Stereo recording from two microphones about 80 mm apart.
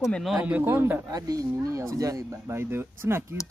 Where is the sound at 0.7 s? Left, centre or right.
Right.